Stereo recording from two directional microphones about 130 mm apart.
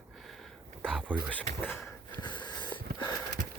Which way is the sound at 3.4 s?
90° right.